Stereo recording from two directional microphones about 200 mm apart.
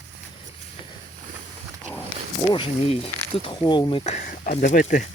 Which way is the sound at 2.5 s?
25° left (ahead or behind).